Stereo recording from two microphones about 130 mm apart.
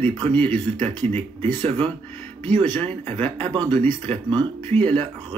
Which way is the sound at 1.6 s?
45° right (ahead or behind).